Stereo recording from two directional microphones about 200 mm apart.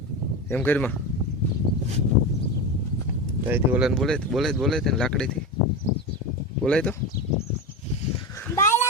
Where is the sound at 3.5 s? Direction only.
5° right (ahead or behind).